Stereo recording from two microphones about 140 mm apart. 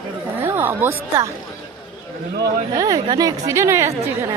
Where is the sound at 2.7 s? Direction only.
25° right (ahead or behind).